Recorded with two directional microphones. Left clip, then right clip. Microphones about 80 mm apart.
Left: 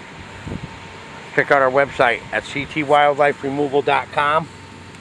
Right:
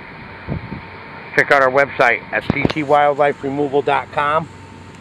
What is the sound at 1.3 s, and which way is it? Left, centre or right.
Speech, left.